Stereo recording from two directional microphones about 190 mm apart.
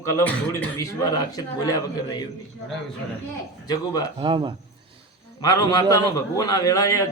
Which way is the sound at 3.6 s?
20° left (ahead or behind).